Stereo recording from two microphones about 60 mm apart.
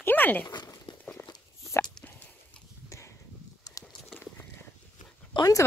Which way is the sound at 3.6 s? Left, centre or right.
Left.